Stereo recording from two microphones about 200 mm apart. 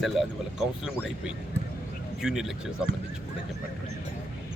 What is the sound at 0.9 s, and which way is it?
Speech, 5° right (ahead or behind).